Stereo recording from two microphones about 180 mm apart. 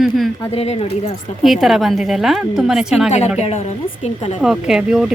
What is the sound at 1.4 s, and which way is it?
A woman's voice, centre (ahead or behind).